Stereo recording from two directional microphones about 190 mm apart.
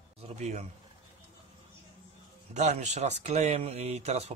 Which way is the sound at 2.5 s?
40° right (ahead or behind).